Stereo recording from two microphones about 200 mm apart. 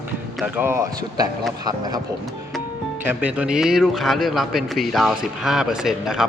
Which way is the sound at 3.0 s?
5° right (ahead or behind).